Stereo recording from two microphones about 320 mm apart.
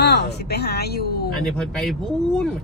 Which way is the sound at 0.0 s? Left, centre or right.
Left.